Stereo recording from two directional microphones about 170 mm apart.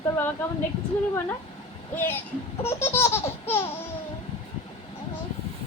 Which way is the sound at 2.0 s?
10° left (ahead or behind).